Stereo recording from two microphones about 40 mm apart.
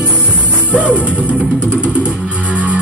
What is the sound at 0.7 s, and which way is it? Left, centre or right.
Music, right.